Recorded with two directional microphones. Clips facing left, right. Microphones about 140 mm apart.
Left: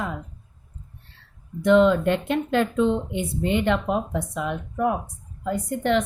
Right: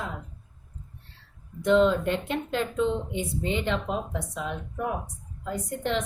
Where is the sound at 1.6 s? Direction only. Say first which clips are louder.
Left 4 dB; 65° left (ahead or behind).